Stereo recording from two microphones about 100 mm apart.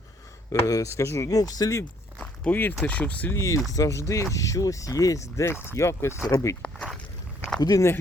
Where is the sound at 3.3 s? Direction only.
30° left (ahead or behind).